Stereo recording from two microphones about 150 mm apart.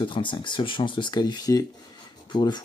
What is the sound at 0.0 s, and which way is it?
Speech, 35° left (ahead or behind).